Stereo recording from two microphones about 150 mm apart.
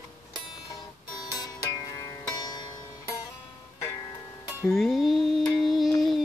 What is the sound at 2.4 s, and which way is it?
Music, 25° left (ahead or behind).